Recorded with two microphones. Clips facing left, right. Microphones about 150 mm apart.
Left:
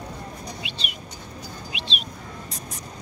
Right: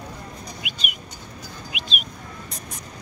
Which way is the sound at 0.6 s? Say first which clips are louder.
Even; 30° left (ahead or behind).